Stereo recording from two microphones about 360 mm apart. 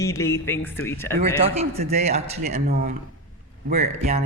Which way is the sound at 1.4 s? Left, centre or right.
Centre.